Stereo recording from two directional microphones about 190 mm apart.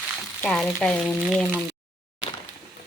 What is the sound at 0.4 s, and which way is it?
Speech, 5° left (ahead or behind).